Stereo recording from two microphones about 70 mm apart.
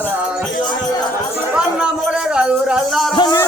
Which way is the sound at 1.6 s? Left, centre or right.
Centre.